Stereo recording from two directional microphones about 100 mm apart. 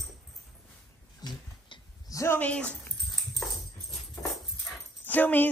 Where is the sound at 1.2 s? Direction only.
45° left (ahead or behind).